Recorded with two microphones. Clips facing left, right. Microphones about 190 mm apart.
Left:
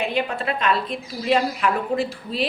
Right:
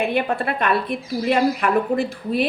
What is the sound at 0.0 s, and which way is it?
A woman's voice, 55° right (ahead or behind).